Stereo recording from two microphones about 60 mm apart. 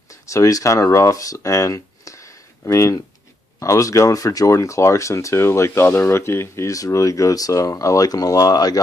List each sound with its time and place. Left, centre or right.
0.1 s speech: left